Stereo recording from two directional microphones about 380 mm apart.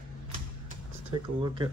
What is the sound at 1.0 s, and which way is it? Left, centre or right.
Speech, centre.